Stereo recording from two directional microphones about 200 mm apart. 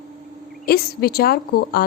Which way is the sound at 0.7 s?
50° left (ahead or behind).